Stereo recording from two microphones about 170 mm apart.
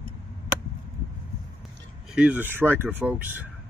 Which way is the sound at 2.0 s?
5° right (ahead or behind).